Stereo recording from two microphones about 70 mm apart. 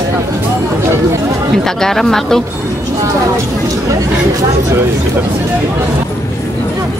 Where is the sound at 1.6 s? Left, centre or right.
Centre.